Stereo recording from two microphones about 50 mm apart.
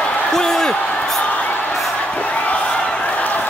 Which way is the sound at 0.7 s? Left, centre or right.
Left.